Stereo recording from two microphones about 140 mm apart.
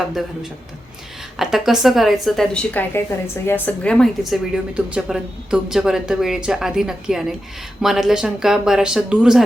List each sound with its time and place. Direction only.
1.4 s a woman's voice: centre (ahead or behind)
2.9 s a woman's voice: 15° left (ahead or behind); by 9.4 s 5° right (ahead or behind)